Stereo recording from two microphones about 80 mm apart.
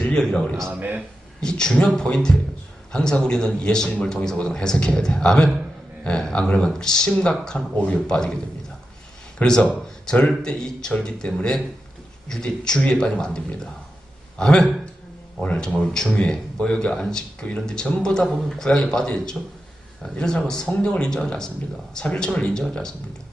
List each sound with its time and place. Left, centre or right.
0.0 s a man's voice: centre
0.7 s speech: right
1.4 s a man's voice: centre
9.4 s a man's voice: centre